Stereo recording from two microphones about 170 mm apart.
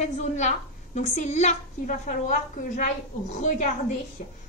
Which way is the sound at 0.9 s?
40° left (ahead or behind).